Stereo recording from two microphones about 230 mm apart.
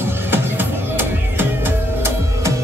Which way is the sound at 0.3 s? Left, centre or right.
Centre.